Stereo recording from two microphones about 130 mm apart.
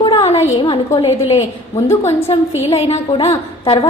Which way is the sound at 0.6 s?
45° left (ahead or behind).